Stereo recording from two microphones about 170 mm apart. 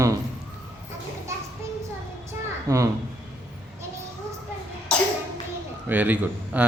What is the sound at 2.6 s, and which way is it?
Speech, 20° right (ahead or behind).